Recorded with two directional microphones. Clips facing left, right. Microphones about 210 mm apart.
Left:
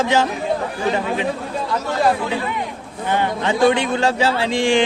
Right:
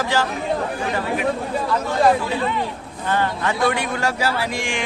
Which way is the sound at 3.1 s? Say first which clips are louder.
Left 2 dB; 20° left (ahead or behind).